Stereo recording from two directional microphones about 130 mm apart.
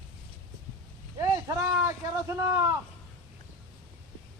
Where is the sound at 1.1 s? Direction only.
25° right (ahead or behind).